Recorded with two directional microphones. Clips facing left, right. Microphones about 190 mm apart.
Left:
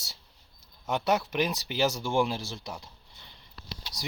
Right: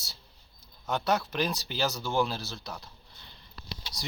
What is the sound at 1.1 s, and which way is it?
Speech, 20° left (ahead or behind).